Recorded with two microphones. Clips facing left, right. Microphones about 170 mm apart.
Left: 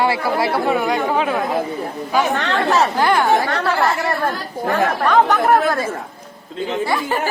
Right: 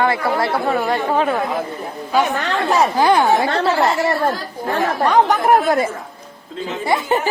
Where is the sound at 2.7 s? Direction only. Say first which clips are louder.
Right 2 dB; 15° right (ahead or behind).